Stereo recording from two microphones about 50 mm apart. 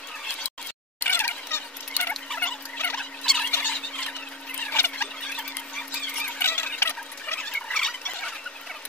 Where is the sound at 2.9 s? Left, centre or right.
Centre.